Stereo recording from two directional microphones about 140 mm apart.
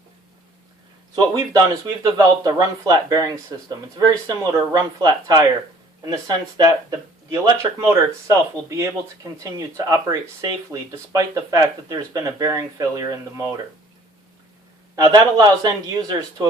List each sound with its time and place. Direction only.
1.1 s speech: 30° right (ahead or behind)
14.9 s speech: 25° right (ahead or behind)